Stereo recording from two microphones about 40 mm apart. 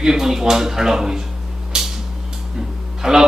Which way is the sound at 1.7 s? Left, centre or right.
Centre.